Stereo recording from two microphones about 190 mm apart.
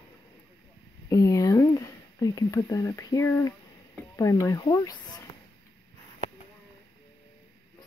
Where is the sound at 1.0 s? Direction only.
15° left (ahead or behind).